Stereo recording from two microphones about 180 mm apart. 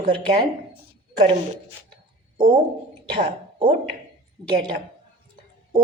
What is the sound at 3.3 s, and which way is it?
Speech, 30° right (ahead or behind).